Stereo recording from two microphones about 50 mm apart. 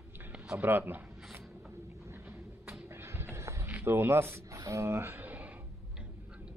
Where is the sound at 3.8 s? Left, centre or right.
Right.